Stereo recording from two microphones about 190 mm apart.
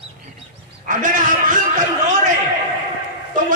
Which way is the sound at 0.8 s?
45° right (ahead or behind).